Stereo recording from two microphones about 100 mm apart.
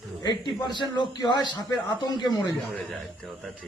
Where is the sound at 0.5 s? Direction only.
50° left (ahead or behind).